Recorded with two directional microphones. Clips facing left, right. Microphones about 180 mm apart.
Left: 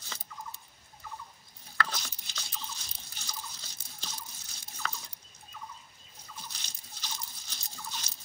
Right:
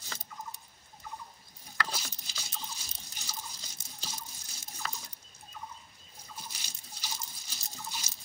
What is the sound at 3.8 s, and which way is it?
Drip, 45° right (ahead or behind).